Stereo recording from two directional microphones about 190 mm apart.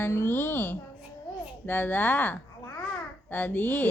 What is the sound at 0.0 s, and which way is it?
A woman's voice, 15° left (ahead or behind).